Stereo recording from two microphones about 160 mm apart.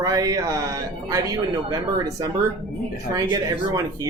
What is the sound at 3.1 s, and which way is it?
Speech, 20° right (ahead or behind).